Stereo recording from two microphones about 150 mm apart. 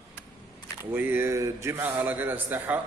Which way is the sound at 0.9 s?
15° right (ahead or behind).